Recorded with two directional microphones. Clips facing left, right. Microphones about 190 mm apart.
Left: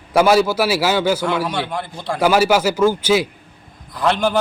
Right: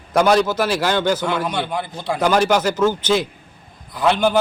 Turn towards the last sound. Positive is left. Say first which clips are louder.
# right 1 dB
turn(degrees=0)  # may be behind; listen again after turning